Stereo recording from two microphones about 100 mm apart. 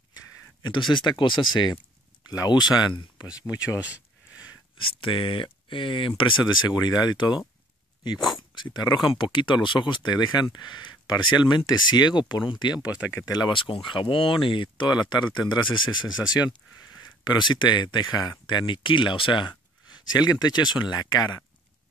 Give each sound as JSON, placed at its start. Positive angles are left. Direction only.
{"t": 0.1, "sound": "speech", "side_deg": 50}
{"t": 3.3, "sound": "speech", "side_deg": 35}
{"t": 4.7, "sound": "speech", "side_deg": 60}
{"t": 8.6, "sound": "speech", "side_deg": 50}
{"t": 18.7, "sound": "speech", "side_deg": 55}